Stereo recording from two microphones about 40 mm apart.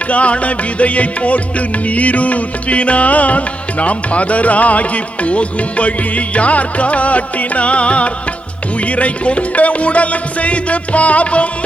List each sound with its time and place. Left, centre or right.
0.1 s music: left